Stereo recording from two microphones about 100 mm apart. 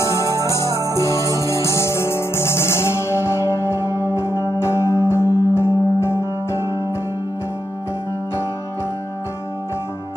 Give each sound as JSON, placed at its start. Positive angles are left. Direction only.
{"t": 0.0, "sound": "music", "side_deg": 30}
{"t": 0.6, "sound": "music", "side_deg": -35}
{"t": 1.5, "sound": "music", "side_deg": 30}